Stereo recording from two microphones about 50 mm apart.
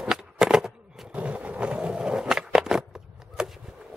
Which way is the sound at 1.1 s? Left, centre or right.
Right.